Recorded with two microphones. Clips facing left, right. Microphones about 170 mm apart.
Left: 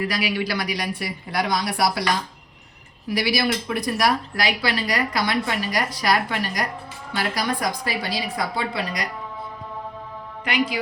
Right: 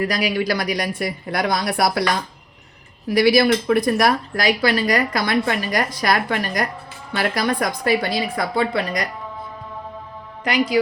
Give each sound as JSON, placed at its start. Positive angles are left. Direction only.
{"t": 0.0, "sound": "speech", "side_deg": -40}
{"t": 3.1, "sound": "speech", "side_deg": -50}
{"t": 10.4, "sound": "a man's voice", "side_deg": -40}